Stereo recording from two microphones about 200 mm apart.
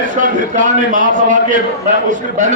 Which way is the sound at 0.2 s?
40° right (ahead or behind).